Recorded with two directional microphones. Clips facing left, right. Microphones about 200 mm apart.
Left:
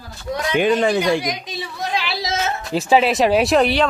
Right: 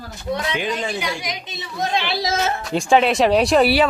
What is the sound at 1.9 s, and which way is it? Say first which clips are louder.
Speech: right 2 dB; 30° right (ahead or behind).